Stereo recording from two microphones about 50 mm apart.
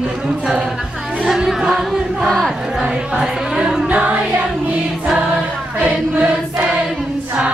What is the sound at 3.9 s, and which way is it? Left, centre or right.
Music, right.